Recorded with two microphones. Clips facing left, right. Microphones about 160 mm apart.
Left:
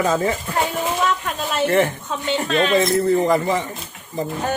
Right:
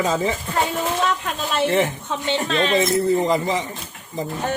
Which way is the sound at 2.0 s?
30° right (ahead or behind).